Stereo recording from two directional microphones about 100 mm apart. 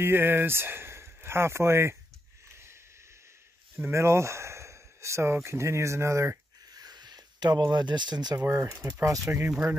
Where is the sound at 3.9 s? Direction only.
30° right (ahead or behind); by 8.4 s 45° right (ahead or behind).